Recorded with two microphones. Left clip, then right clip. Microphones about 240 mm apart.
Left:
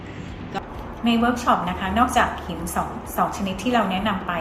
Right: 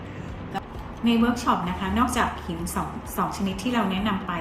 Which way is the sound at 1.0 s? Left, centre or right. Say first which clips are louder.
Left 3 dB; right.